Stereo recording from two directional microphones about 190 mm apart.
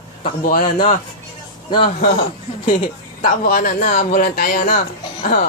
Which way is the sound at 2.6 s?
45° left (ahead or behind).